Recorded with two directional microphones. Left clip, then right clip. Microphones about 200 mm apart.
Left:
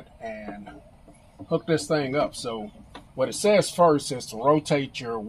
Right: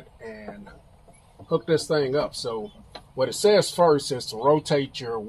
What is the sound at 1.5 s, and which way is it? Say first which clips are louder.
Speech: right 2 dB; 20° right (ahead or behind).